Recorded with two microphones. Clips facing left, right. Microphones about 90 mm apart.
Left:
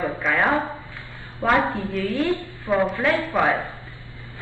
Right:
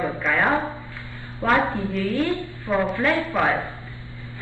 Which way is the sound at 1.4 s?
Centre (ahead or behind).